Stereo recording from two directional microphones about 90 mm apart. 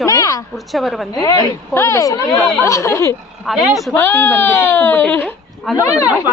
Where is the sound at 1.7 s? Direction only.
30° left (ahead or behind).